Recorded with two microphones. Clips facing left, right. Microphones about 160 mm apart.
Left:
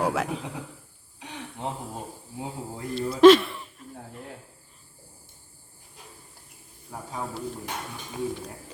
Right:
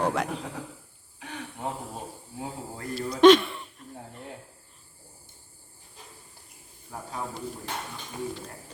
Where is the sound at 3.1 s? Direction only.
Centre (ahead or behind).